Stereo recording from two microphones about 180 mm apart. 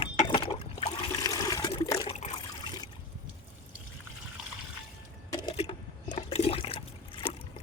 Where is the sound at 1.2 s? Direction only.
20° left (ahead or behind).